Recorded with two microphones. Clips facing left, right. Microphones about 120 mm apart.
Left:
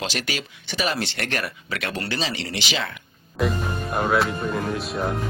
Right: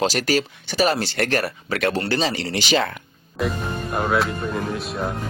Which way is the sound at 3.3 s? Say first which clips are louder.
Even; centre (ahead or behind).